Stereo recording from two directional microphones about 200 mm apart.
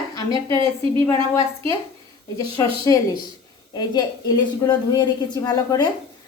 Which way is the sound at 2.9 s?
15° left (ahead or behind).